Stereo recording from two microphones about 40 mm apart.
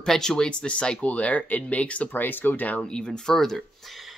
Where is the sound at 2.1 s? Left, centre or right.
Left.